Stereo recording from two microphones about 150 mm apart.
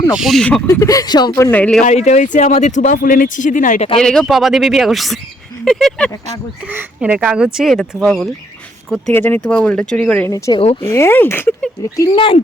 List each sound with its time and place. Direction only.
0.1 s speech: centre (ahead or behind)
0.7 s speech: 25° left (ahead or behind)
1.4 s speech: 10° left (ahead or behind)
1.8 s speech: 50° left (ahead or behind)
3.9 s speech: 5° left (ahead or behind)
6.7 s speech: 10° right (ahead or behind)
9.1 s speech: 15° left (ahead or behind)
10.3 s speech: 20° left (ahead or behind)
12.0 s speech: 35° left (ahead or behind)